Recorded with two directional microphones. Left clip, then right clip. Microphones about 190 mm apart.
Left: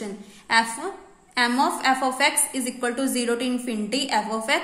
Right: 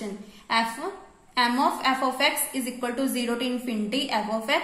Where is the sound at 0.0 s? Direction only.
20° left (ahead or behind).